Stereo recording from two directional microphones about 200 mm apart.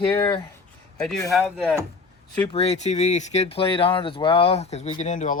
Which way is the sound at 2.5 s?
30° left (ahead or behind).